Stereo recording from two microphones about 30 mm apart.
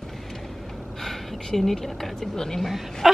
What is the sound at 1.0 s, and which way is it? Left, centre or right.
Speech, centre.